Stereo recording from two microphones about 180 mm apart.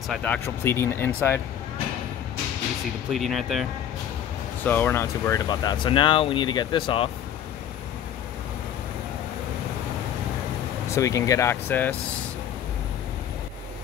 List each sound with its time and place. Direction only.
0.1 s speech: 10° left (ahead or behind)
3.1 s speech: centre (ahead or behind)
4.6 s speech: 15° left (ahead or behind)
10.9 s speech: 15° left (ahead or behind)